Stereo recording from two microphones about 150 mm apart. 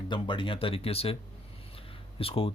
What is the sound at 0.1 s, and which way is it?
Speech, 35° left (ahead or behind).